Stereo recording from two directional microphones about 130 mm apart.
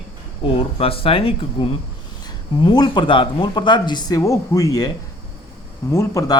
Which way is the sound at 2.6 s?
35° left (ahead or behind).